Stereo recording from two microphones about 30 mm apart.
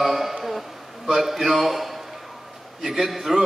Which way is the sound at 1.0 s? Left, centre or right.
Centre.